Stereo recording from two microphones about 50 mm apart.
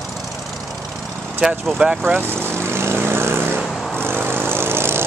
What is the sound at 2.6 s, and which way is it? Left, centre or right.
Vehicle, right.